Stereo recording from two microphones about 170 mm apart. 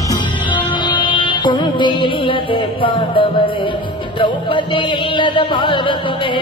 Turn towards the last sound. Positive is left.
turn(degrees=30)  # may be behind; listen again after turning